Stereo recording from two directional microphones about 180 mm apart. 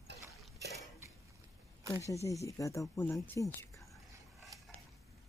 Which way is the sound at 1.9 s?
15° left (ahead or behind).